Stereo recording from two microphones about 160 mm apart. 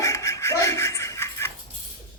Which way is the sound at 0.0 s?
20° left (ahead or behind).